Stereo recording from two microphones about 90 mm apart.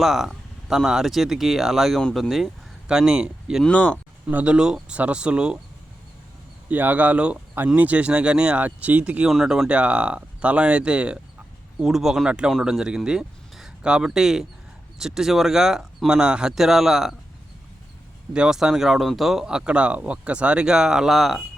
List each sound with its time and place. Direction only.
0.0 s speech: 5° right (ahead or behind)
3.6 s speech: 10° left (ahead or behind)
4.3 s speech: 15° right (ahead or behind)
6.7 s speech: 20° right (ahead or behind)
9.3 s speech: 5° right (ahead or behind)
18.3 s speech: 10° right (ahead or behind)